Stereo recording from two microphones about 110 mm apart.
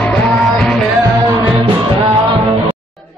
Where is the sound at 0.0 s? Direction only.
10° left (ahead or behind).